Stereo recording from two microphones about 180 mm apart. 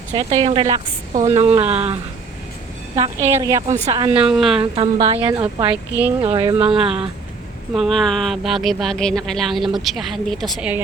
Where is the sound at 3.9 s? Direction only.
30° right (ahead or behind).